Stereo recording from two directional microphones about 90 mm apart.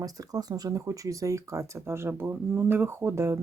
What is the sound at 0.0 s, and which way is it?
Speech, 40° right (ahead or behind).